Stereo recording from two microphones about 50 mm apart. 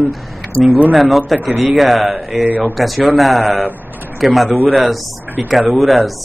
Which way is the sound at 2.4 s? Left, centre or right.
Right.